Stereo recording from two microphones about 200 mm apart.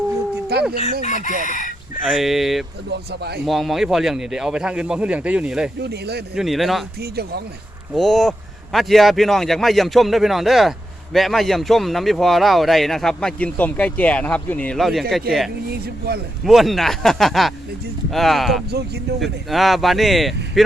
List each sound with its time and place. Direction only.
0.5 s chicken: 55° right (ahead or behind)
1.0 s speech: 35° left (ahead or behind)
2.0 s speech: centre (ahead or behind)
2.9 s speech: 55° right (ahead or behind)
3.4 s speech: centre (ahead or behind)
5.8 s speech: 55° right (ahead or behind)
6.3 s speech: centre (ahead or behind)
7.0 s speech: 55° right (ahead or behind)
7.9 s speech: centre (ahead or behind)
15.7 s speech: 50° right (ahead or behind)
16.4 s speech: centre (ahead or behind)